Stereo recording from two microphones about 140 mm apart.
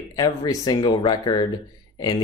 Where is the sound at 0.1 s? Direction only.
25° left (ahead or behind).